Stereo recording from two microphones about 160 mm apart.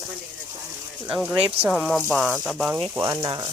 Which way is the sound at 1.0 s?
10° right (ahead or behind).